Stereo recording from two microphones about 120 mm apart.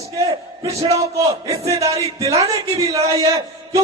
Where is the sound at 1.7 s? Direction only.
30° right (ahead or behind).